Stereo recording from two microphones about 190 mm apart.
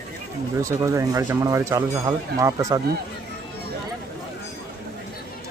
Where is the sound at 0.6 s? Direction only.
15° right (ahead or behind).